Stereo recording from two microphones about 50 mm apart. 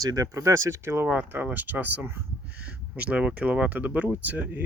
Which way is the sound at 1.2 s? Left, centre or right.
Right.